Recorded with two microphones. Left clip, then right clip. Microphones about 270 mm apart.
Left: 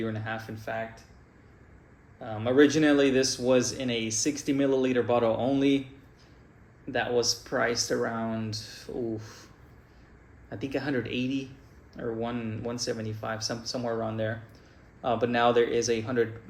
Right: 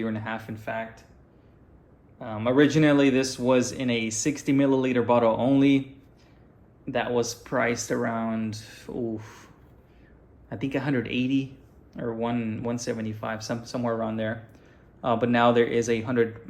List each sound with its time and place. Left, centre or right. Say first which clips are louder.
0.1 s speech: right 2 dB; right
2.2 s speech: right 1 dB; right
7.2 s speech: right 1 dB; right
10.5 s speech: right 3 dB; right